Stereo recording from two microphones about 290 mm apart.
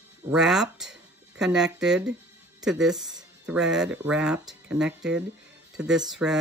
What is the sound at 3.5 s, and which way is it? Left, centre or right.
Speech, centre.